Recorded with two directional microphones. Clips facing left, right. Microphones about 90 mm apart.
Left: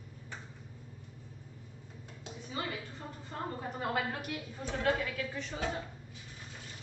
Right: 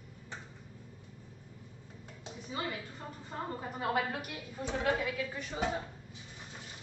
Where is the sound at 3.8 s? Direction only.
15° right (ahead or behind).